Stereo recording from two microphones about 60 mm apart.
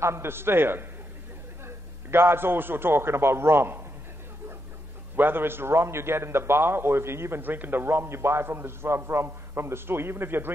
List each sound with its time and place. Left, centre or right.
0.0 s a man's voice: right
2.0 s a man's voice: right
5.1 s a man's voice: right